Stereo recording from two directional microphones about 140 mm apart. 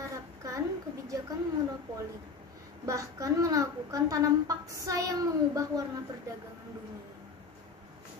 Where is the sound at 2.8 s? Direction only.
25° right (ahead or behind).